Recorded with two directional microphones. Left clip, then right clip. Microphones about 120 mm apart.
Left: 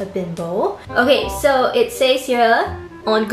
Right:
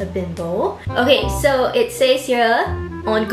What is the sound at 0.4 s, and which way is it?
Music, centre (ahead or behind).